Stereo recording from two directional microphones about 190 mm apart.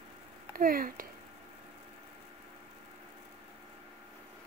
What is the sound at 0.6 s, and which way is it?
Speech, 45° right (ahead or behind).